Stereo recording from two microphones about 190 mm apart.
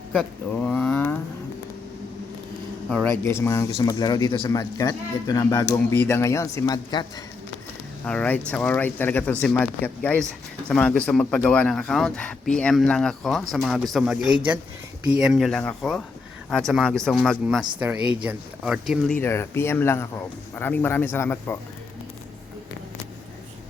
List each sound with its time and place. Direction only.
0.1 s a sound: 5° left (ahead or behind)
2.9 s speech: 10° left (ahead or behind)
8.0 s speech: 5° left (ahead or behind)
19.2 s speech: 15° left (ahead or behind)